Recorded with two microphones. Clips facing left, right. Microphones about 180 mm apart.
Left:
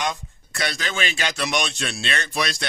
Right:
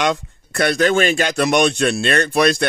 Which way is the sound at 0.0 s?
70° right (ahead or behind).